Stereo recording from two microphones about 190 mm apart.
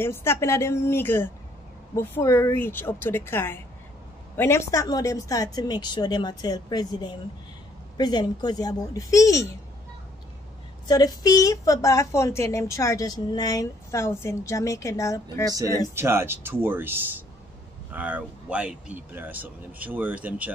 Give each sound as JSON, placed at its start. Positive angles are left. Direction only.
{"t": 0.0, "sound": "a woman's voice", "side_deg": 15}
{"t": 10.9, "sound": "a woman's voice", "side_deg": 20}
{"t": 15.9, "sound": "speech", "side_deg": -15}